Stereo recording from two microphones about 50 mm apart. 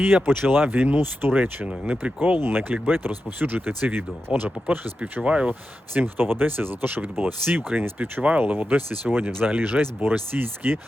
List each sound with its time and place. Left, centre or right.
0.0 s speech: right
1.6 s speech: right
2.4 s speech: right
4.3 s speech: right
5.5 s speech: right
8.2 s speech: right
8.5 s speech: right